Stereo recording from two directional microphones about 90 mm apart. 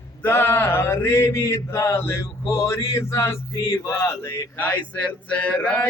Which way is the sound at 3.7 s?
30° left (ahead or behind).